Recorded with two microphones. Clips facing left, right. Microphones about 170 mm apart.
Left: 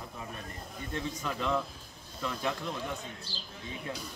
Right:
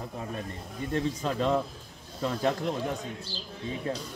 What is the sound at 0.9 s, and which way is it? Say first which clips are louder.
A man's voice: right 7 dB; 30° right (ahead or behind).